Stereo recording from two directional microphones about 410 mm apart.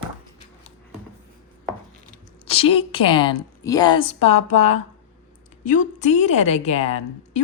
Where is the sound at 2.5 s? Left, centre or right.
Centre.